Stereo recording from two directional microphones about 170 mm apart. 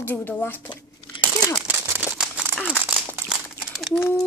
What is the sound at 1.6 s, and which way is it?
Crumpling, 10° right (ahead or behind).